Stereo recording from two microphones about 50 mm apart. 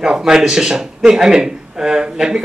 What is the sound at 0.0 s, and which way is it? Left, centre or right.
Speech, centre.